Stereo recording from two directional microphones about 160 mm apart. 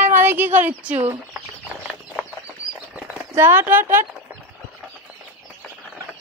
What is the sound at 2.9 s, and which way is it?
Speech, 15° right (ahead or behind).